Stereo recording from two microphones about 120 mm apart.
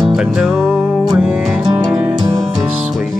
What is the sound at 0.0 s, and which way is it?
Music, 5° right (ahead or behind).